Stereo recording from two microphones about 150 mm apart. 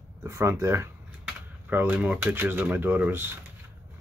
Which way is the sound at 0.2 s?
20° right (ahead or behind).